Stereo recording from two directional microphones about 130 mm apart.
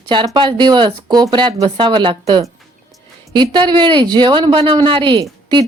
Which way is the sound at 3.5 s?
35° right (ahead or behind).